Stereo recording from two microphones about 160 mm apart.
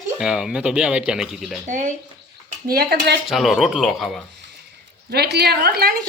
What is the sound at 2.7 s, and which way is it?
Speech, 80° right.